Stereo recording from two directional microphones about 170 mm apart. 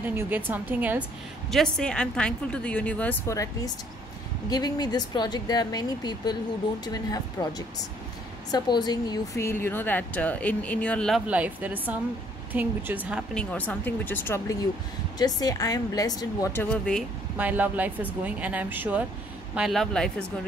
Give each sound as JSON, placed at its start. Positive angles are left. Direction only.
{"t": 0.0, "sound": "speech", "side_deg": -10}
{"t": 1.5, "sound": "a woman's voice", "side_deg": 5}
{"t": 13.3, "sound": "a woman's voice", "side_deg": 5}
{"t": 16.7, "sound": "speech", "side_deg": 5}
{"t": 17.4, "sound": "speech", "side_deg": -10}